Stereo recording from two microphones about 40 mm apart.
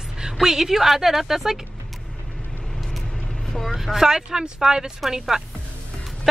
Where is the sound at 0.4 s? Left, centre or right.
Centre.